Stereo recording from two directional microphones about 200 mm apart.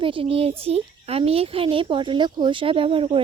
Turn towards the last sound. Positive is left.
turn(degrees=-25)  # may be behind; listen again after turning